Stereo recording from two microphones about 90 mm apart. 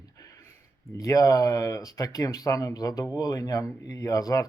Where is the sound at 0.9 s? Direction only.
40° left (ahead or behind).